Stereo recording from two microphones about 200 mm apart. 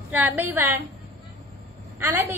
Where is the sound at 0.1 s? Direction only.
10° right (ahead or behind).